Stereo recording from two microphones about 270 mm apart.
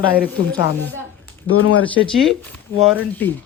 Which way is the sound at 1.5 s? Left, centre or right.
Left.